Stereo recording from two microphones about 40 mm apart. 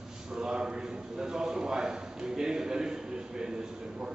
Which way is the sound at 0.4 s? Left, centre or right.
Centre.